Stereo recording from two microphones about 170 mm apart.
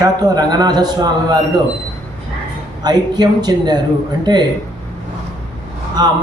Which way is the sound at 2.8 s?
25° right (ahead or behind).